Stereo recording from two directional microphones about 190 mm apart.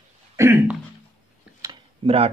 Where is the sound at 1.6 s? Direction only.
25° right (ahead or behind).